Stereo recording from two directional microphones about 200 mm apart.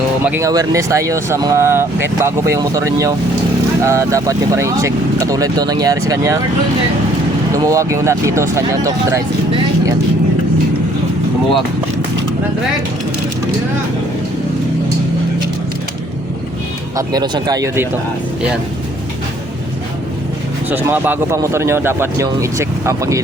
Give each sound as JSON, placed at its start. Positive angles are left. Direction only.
{"t": 0.3, "sound": "speech", "side_deg": -15}
{"t": 7.5, "sound": "speech", "side_deg": -15}
{"t": 17.0, "sound": "speech", "side_deg": -20}
{"t": 20.7, "sound": "speech", "side_deg": -10}